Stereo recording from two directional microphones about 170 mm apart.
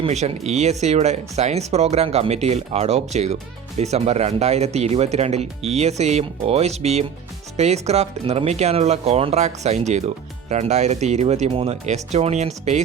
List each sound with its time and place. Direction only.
0.0 s speech: 40° right (ahead or behind)